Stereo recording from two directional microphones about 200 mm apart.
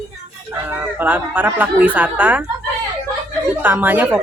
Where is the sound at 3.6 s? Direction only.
10° right (ahead or behind).